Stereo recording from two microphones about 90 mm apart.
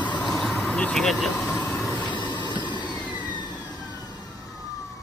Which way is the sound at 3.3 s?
55° left (ahead or behind).